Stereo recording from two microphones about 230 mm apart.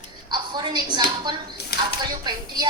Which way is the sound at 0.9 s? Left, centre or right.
Centre.